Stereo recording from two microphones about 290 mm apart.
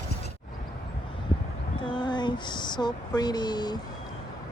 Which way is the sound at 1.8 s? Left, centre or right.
Centre.